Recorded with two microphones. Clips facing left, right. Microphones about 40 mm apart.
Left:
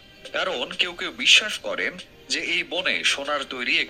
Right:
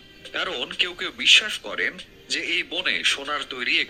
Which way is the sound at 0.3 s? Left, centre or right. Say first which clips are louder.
Left 1 dB; right.